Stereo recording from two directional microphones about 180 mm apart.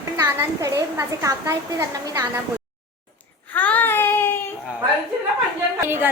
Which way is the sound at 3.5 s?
10° left (ahead or behind).